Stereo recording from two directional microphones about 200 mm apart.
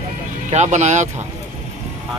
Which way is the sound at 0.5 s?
35° right (ahead or behind).